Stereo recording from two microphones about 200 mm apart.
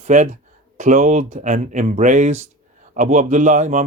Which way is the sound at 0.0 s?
40° right (ahead or behind).